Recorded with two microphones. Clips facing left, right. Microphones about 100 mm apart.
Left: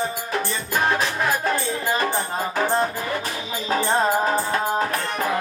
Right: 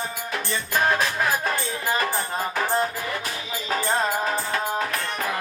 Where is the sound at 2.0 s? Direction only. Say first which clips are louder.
Left 2 dB; 30° left (ahead or behind).